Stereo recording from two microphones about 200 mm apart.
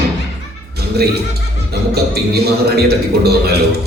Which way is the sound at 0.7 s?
55° right (ahead or behind).